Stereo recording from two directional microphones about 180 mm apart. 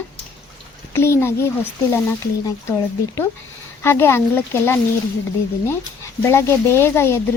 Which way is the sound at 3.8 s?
15° left (ahead or behind).